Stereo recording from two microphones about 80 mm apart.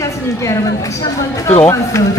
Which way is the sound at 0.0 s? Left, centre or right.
Left.